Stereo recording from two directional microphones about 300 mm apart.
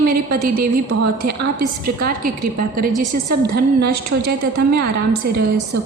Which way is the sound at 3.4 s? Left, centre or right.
Right.